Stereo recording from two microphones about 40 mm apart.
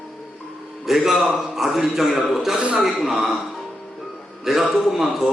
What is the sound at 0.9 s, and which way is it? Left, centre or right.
A man's voice, centre.